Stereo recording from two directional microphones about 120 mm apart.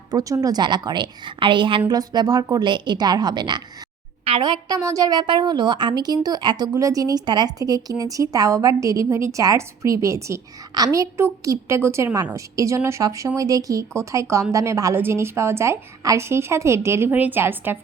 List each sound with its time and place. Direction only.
0.1 s a woman's voice: 30° right (ahead or behind)
1.9 s a woman's voice: 35° right (ahead or behind)
4.2 s a sound: 55° right (ahead or behind)
4.4 s a woman's voice: 40° right (ahead or behind)
6.7 s speech: 30° right (ahead or behind)